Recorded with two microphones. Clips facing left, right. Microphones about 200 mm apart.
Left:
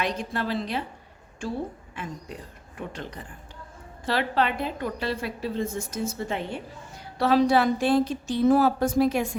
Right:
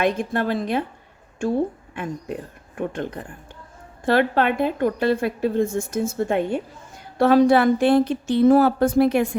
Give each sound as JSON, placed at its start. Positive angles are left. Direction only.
{"t": 0.0, "sound": "a woman's voice", "side_deg": -55}